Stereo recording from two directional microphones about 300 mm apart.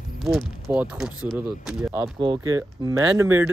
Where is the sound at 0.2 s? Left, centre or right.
Centre.